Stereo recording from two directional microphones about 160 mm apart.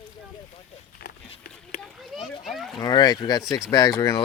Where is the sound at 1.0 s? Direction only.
75° left (ahead or behind).